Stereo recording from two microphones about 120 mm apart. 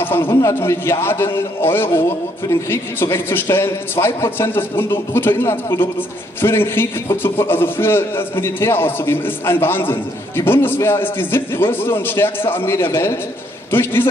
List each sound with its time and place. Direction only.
0.0 s a man's voice: 20° left (ahead or behind)